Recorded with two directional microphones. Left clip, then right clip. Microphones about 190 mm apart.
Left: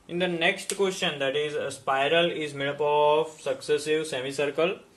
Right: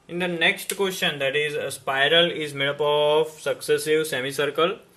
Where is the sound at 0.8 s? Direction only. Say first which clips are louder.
Right 3 dB; 20° right (ahead or behind).